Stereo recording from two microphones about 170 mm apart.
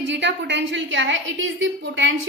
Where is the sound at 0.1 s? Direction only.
90° right.